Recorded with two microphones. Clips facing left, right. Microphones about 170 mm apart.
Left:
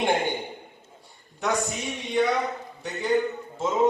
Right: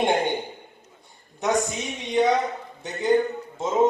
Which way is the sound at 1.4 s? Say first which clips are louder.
Right 3 dB; 20° right (ahead or behind).